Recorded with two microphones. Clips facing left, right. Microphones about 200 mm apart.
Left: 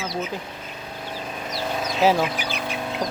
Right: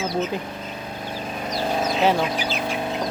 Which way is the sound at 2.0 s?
Centre (ahead or behind).